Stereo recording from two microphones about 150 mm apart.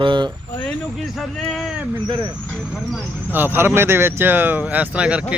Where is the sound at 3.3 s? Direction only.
15° right (ahead or behind).